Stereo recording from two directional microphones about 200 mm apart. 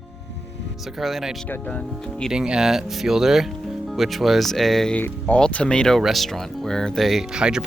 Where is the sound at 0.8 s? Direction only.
Centre (ahead or behind).